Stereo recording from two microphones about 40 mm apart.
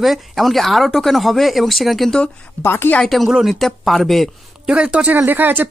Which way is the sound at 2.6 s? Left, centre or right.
Left.